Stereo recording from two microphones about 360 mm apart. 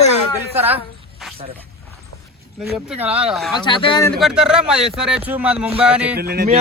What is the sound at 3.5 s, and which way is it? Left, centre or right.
Speech, centre.